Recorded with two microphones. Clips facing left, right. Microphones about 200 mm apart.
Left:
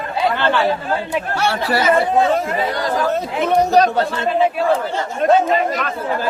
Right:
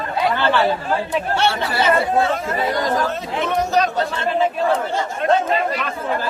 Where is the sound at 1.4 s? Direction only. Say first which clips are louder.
Left 4 dB; 25° right (ahead or behind).